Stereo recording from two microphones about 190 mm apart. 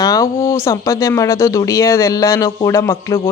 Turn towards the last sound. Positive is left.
turn(degrees=15)  # may be behind; listen again after turning